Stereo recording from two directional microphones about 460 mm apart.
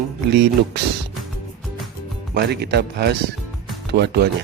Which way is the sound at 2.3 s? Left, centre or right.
Right.